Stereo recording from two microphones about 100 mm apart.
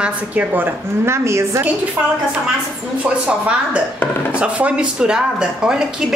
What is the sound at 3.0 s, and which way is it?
A woman's voice, 15° right (ahead or behind).